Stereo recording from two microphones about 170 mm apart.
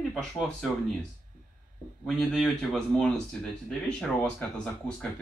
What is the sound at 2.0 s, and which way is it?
Speech, centre (ahead or behind).